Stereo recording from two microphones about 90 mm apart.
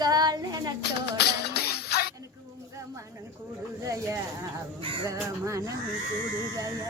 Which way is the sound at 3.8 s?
35° right (ahead or behind).